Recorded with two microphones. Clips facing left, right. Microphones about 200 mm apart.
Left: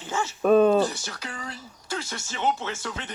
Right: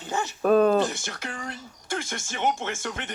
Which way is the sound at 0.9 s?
50° right (ahead or behind).